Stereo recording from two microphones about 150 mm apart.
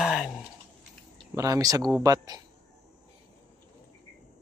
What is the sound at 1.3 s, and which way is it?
Speech, 20° right (ahead or behind).